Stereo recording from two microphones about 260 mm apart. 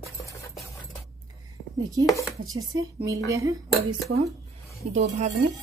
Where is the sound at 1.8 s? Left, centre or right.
Centre.